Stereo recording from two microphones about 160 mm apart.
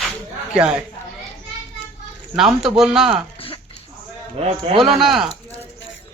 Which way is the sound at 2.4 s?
Centre (ahead or behind).